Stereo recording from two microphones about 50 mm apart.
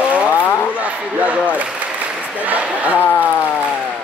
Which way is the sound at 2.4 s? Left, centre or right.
Right.